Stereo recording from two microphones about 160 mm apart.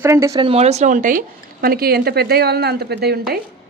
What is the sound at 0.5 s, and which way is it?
Speech, 40° right (ahead or behind).